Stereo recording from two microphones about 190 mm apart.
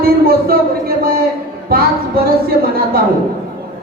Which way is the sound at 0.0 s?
55° right (ahead or behind).